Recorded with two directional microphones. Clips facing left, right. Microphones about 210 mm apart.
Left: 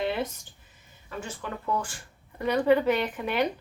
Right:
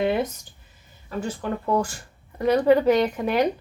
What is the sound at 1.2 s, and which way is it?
Speech, 40° right (ahead or behind).